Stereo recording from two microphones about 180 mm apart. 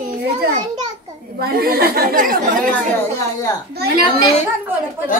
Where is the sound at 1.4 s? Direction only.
55° right (ahead or behind).